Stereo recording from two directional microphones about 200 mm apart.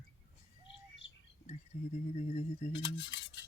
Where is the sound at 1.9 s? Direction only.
35° left (ahead or behind).